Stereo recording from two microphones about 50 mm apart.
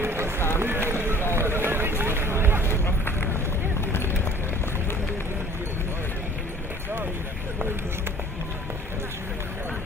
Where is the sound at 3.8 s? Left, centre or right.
Left.